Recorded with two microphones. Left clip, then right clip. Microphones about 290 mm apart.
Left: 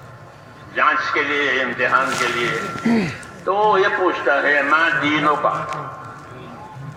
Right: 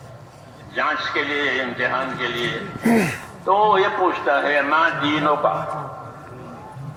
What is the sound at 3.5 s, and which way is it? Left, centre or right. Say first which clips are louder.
A man's voice: even; right.